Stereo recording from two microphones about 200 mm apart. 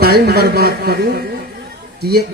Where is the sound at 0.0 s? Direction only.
50° right (ahead or behind).